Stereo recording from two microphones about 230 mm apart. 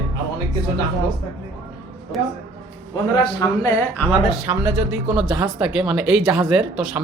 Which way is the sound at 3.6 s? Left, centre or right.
Centre.